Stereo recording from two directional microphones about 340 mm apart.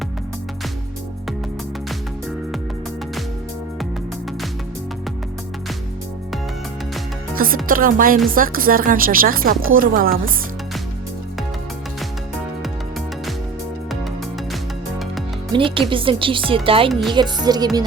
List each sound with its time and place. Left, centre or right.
7.3 s speech: right
15.5 s speech: centre